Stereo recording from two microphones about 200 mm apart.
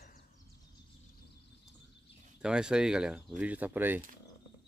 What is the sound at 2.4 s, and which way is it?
Speech, 5° right (ahead or behind).